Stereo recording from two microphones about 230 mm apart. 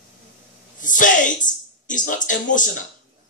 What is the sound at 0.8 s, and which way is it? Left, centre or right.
A man's voice, left.